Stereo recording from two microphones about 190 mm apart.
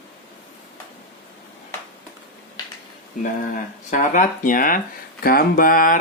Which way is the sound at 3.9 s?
45° left (ahead or behind).